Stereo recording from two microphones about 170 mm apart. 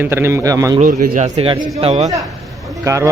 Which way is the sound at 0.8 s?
50° right (ahead or behind).